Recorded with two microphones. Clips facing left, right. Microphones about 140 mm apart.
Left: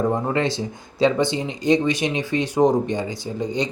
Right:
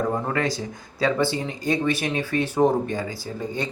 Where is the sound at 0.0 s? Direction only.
20° left (ahead or behind).